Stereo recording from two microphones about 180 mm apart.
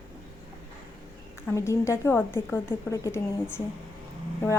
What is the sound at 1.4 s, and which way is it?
A woman's voice, 15° left (ahead or behind).